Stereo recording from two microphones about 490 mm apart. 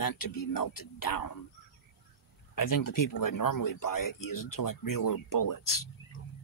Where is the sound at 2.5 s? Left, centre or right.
Left.